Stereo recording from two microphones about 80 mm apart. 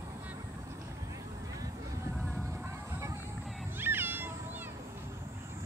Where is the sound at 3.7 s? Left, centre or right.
Right.